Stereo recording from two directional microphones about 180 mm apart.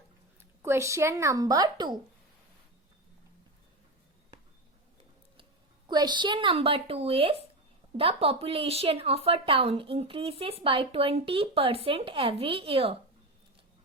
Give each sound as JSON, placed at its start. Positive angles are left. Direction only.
{"t": 0.6, "sound": "a woman's voice", "side_deg": -15}
{"t": 5.9, "sound": "a woman's voice", "side_deg": -25}